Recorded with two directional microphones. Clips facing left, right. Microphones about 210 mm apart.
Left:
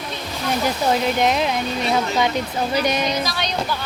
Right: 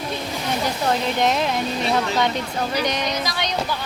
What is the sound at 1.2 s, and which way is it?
Speech, centre (ahead or behind).